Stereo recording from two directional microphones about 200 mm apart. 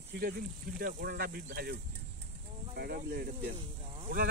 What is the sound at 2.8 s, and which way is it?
Speech, 50° right (ahead or behind).